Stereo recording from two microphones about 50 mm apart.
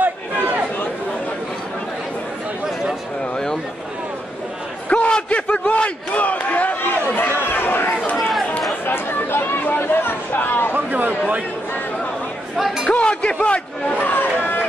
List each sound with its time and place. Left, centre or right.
4.8 s a sound: left
5.7 s a man's voice: left
7.2 s chatter: left
8.2 s chatter: centre
8.8 s speech: left
10.7 s a man's voice: right
12.5 s speech: centre
12.9 s a man's voice: left
13.9 s chatter: left